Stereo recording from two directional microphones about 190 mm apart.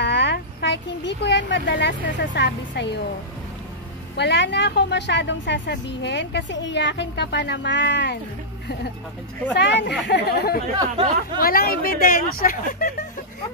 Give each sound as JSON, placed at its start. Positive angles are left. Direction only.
{"t": 0.0, "sound": "speech", "side_deg": 65}
{"t": 4.2, "sound": "a woman's voice", "side_deg": 65}
{"t": 9.5, "sound": "a woman's voice", "side_deg": 65}
{"t": 10.8, "sound": "speech", "side_deg": -25}
{"t": 11.4, "sound": "speech", "side_deg": 50}